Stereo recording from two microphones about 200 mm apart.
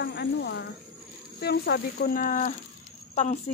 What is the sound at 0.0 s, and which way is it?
Speech, 60° left (ahead or behind).